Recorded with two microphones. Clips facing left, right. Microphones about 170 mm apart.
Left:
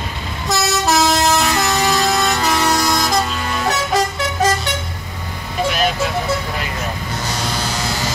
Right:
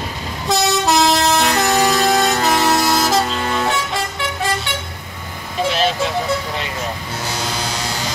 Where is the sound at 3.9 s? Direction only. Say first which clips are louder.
Left 5 dB; 40° left (ahead or behind).